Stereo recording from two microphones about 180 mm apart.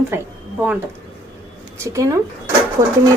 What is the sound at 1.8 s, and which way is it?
Speech, 15° right (ahead or behind).